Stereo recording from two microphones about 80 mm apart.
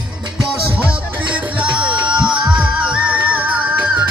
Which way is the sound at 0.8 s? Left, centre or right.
Centre.